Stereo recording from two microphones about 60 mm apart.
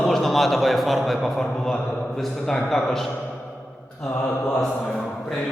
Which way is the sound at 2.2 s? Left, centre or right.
Centre.